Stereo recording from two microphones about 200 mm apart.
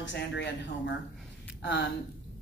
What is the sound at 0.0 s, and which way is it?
Speech, 60° left (ahead or behind).